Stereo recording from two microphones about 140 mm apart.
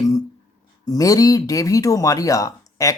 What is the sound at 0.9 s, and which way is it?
Speech, 25° left (ahead or behind).